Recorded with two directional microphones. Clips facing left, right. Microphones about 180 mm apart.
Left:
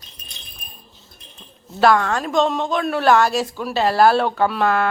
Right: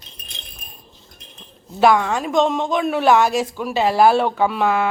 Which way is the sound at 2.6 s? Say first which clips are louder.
Right 1 dB; 15° right (ahead or behind).